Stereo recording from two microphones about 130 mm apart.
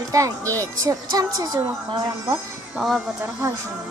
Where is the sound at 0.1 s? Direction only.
25° right (ahead or behind).